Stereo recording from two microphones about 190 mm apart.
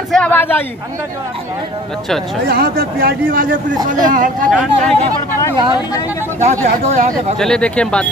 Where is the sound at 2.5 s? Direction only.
50° right (ahead or behind).